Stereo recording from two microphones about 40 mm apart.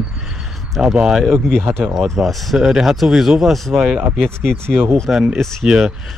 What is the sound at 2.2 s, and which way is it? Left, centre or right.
Speech, right.